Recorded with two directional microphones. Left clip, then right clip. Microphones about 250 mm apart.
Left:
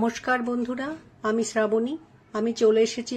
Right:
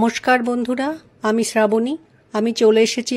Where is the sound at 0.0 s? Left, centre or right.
Right.